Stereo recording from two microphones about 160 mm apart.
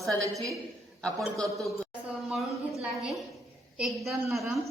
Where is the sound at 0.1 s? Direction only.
20° right (ahead or behind).